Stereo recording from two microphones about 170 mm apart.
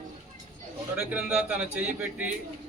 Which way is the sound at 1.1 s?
5° right (ahead or behind).